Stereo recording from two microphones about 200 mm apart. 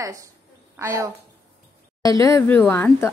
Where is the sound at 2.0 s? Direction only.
15° left (ahead or behind).